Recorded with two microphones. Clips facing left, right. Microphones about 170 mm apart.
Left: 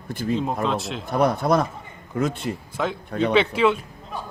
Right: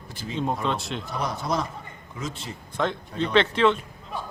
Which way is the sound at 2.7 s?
5° left (ahead or behind).